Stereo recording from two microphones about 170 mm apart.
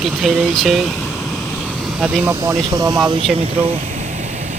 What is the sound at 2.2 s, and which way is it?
Speech, 20° right (ahead or behind).